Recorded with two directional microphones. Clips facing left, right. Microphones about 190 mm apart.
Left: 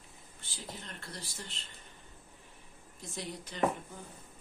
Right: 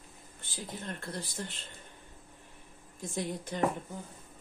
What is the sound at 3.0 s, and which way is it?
Speech, 50° right (ahead or behind).